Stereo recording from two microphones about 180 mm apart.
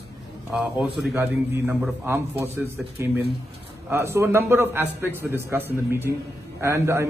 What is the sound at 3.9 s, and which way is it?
A man's voice, 15° right (ahead or behind).